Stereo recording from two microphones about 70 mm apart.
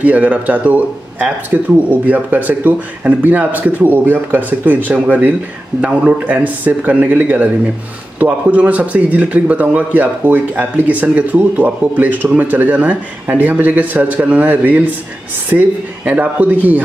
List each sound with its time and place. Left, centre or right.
0.0 s speech: right